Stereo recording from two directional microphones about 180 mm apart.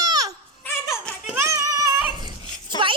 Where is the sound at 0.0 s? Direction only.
20° right (ahead or behind).